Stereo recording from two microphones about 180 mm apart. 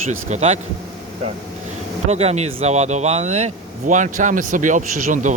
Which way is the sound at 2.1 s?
35° right (ahead or behind).